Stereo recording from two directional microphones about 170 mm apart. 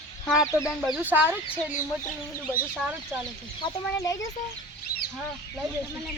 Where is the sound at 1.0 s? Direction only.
10° right (ahead or behind).